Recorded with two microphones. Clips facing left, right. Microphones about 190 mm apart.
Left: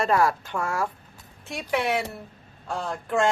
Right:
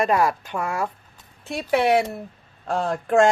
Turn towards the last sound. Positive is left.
turn(degrees=-50)  # may be behind; listen again after turning